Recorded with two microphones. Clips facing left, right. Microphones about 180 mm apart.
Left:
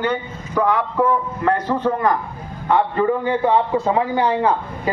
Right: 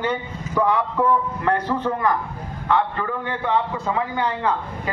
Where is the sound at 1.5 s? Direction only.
10° left (ahead or behind).